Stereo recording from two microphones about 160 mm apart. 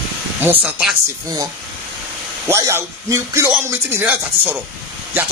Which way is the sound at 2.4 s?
15° right (ahead or behind).